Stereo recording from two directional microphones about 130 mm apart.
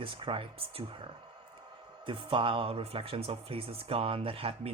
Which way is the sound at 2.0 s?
40° right (ahead or behind).